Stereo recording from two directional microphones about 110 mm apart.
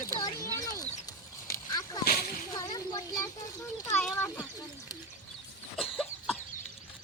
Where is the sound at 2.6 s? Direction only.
35° left (ahead or behind).